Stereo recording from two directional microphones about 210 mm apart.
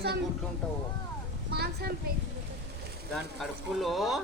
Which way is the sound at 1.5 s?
50° right (ahead or behind).